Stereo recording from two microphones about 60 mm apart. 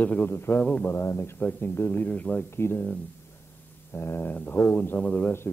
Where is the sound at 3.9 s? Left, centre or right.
Left.